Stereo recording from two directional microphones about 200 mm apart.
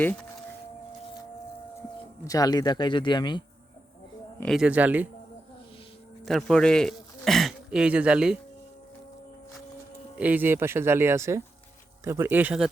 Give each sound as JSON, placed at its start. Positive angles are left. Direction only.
{"t": 0.0, "sound": "speech", "side_deg": 10}
{"t": 2.2, "sound": "speech", "side_deg": 20}
{"t": 4.4, "sound": "speech", "side_deg": 0}
{"t": 6.2, "sound": "a man's voice", "side_deg": 0}
{"t": 10.2, "sound": "speech", "side_deg": -10}